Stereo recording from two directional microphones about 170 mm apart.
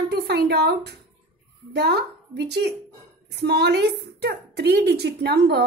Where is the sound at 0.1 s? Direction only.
75° right (ahead or behind).